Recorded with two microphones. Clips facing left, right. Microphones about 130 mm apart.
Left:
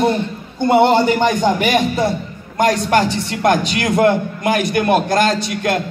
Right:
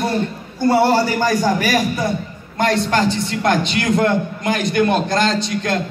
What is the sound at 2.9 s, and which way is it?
A man's voice, 55° left (ahead or behind).